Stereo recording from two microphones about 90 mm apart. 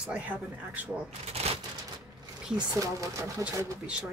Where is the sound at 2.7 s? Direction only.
40° right (ahead or behind).